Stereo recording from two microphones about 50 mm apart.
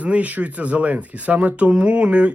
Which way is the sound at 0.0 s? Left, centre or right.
Right.